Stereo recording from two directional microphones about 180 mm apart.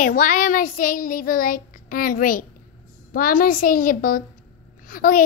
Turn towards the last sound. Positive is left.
turn(degrees=50)  # may be behind; listen again after turning